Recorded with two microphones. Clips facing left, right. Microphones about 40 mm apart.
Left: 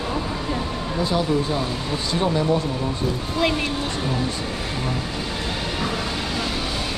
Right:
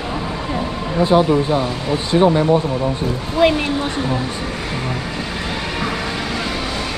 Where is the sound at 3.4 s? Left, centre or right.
Centre.